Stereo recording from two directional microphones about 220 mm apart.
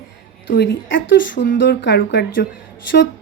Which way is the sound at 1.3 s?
40° left (ahead or behind).